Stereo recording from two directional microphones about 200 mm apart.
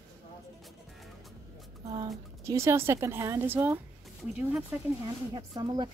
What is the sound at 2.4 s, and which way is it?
A woman's voice, 15° right (ahead or behind).